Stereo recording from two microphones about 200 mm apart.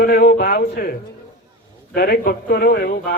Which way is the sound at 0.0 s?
45° left (ahead or behind).